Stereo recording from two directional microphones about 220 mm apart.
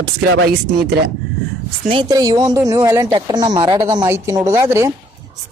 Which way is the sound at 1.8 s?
20° right (ahead or behind).